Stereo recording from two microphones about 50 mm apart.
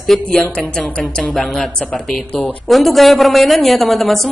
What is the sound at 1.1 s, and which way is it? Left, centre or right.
A woman's voice, centre.